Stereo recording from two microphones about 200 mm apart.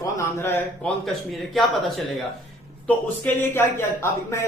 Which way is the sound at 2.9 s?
10° left (ahead or behind).